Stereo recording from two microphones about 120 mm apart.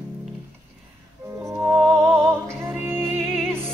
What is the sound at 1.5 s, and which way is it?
Music, 15° right (ahead or behind).